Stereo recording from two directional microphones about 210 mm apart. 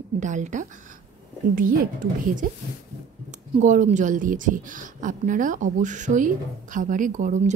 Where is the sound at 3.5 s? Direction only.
35° right (ahead or behind).